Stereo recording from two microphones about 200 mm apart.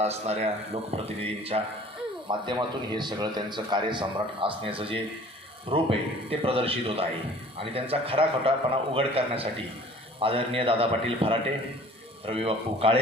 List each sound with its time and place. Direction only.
0.0 s a man's voice: 30° right (ahead or behind)